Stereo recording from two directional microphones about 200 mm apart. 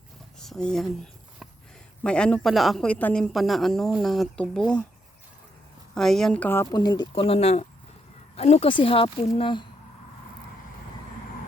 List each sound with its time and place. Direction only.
0.3 s a sound: centre (ahead or behind)
2.0 s speech: 5° left (ahead or behind)
5.9 s speech: centre (ahead or behind)
6.7 s speech: 20° left (ahead or behind)